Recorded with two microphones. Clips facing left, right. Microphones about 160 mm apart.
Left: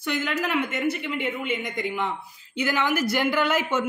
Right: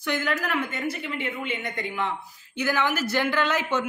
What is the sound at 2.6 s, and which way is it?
A woman's voice, 15° left (ahead or behind).